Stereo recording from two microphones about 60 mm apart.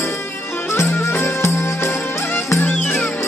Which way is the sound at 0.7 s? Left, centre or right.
Left.